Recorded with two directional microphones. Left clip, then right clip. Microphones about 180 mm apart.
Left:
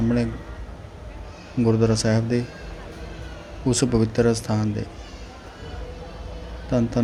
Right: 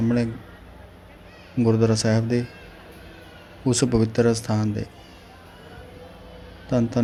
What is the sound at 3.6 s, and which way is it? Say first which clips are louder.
A man's voice: even; centre (ahead or behind).